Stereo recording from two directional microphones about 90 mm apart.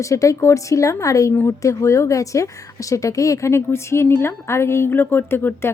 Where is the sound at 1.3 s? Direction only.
25° left (ahead or behind).